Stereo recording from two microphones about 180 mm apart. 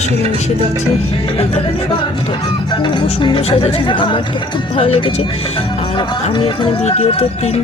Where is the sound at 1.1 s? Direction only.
35° left (ahead or behind).